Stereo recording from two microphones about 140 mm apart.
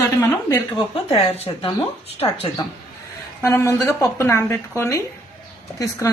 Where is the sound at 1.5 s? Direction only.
35° left (ahead or behind).